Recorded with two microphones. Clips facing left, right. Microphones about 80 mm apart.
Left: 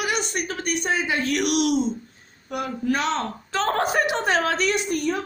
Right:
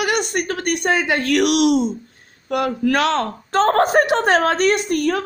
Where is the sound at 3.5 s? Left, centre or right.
Right.